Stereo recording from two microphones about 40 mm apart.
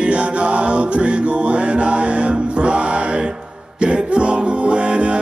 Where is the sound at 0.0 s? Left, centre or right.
Right.